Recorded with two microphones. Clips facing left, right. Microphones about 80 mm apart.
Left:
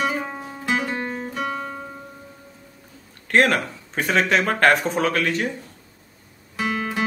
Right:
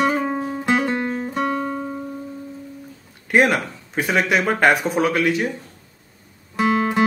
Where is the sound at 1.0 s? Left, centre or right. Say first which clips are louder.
Right 4 dB; centre.